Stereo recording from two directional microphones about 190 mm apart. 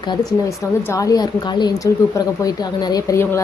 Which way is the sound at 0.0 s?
20° left (ahead or behind).